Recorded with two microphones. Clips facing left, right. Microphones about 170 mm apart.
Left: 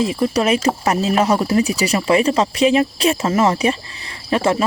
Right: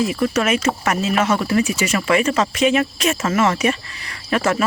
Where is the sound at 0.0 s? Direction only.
30° left (ahead or behind).